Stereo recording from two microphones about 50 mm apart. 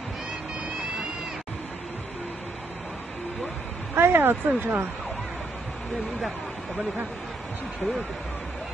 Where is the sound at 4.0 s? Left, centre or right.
Right.